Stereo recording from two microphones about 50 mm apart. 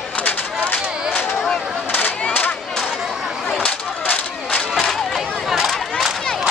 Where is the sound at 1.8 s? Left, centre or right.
Left.